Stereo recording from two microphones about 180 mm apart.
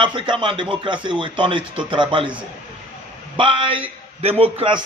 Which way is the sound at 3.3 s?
30° right (ahead or behind).